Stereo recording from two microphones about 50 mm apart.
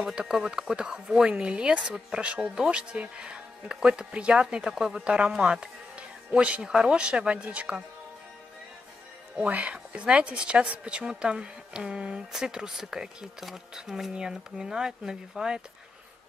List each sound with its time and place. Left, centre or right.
0.1 s speech: centre
9.4 s speech: right; by 15.6 s centre